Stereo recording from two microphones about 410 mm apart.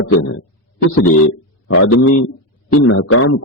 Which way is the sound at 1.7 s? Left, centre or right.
Left.